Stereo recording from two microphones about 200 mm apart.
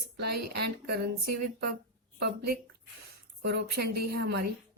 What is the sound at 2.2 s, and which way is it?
A woman's voice, 50° right (ahead or behind).